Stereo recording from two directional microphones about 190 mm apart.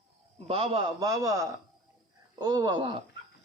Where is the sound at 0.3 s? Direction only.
30° right (ahead or behind).